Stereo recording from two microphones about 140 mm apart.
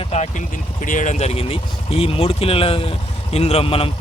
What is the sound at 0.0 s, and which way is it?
Speech, 50° left (ahead or behind).